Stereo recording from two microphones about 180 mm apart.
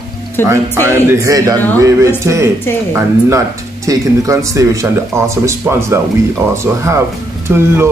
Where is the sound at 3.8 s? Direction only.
20° right (ahead or behind).